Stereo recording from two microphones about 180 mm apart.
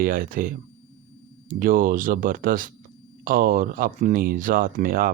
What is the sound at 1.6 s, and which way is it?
Speech, 50° right (ahead or behind).